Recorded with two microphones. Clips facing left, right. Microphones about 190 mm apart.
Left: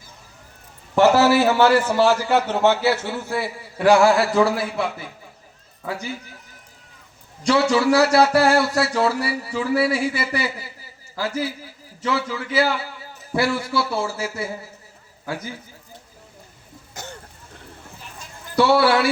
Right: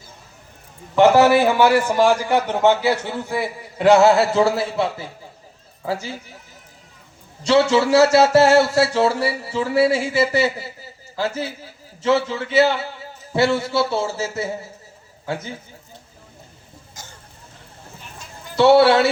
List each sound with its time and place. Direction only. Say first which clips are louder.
0.9 s a man's voice: right 2 dB; 15° right (ahead or behind)
7.4 s a man's voice: right 2 dB; 25° right (ahead or behind)
16.9 s cough: left 8 dB; 65° left (ahead or behind)
18.5 s a man's voice: right 4 dB; 25° right (ahead or behind)